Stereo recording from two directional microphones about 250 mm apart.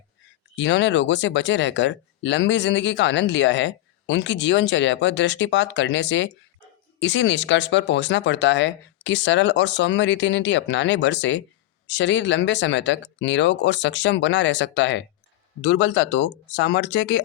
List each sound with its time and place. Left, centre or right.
0.5 s speech: left